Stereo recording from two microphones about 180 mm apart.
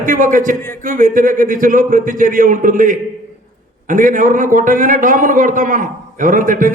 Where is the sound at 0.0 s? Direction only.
45° right (ahead or behind).